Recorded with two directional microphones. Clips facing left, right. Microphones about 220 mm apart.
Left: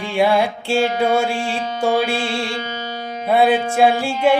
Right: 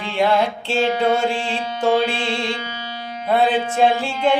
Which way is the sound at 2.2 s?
40° left (ahead or behind).